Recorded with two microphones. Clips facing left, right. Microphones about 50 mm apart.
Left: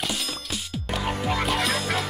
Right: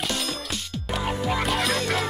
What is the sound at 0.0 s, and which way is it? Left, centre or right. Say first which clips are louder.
Music: right 2 dB; centre.